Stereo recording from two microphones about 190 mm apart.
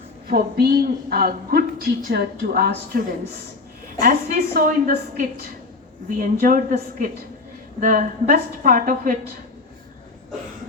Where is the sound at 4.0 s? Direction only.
45° right (ahead or behind).